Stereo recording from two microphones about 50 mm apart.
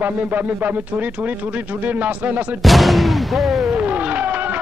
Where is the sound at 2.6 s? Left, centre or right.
Centre.